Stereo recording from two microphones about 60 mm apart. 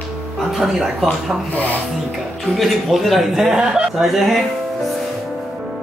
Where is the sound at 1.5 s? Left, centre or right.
Left.